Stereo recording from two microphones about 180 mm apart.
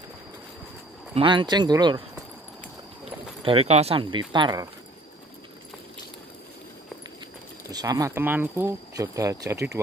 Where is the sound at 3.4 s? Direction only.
30° right (ahead or behind).